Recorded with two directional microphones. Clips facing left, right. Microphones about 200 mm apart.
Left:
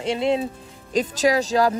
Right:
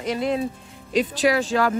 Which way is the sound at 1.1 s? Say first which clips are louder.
Left 3 dB; 40° left (ahead or behind).